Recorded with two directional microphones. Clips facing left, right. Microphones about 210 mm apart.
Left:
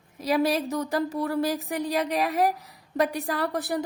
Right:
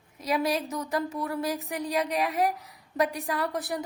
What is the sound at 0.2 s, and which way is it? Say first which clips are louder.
A woman's voice: left 4 dB; 30° left (ahead or behind).